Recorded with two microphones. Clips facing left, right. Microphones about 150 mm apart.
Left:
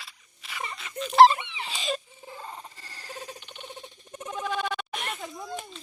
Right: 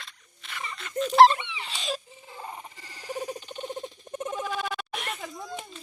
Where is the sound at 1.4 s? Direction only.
50° left (ahead or behind).